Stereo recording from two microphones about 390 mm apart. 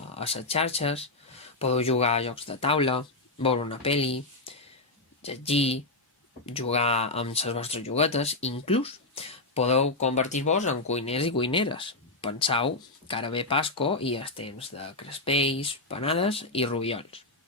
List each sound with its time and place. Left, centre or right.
0.2 s speech: centre